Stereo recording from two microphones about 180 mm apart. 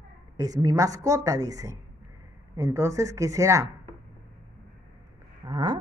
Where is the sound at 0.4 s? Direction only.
20° right (ahead or behind).